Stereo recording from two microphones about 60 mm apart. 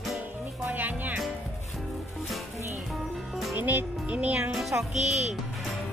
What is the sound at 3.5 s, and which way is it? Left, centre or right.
A child's voice, right.